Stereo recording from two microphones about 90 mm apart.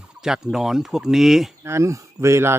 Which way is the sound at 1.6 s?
35° right (ahead or behind).